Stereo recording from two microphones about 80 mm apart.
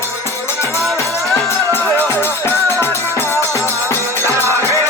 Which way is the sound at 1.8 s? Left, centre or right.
Right.